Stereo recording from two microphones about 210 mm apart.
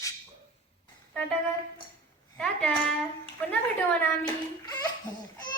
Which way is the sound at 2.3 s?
5° left (ahead or behind).